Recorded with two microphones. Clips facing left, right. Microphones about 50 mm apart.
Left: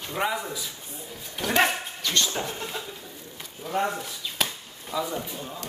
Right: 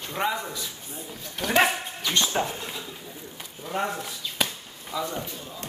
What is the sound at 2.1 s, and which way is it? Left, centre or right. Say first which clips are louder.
Speech: right 2 dB; centre.